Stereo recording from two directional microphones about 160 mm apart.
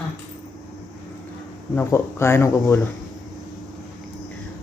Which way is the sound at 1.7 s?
15° left (ahead or behind).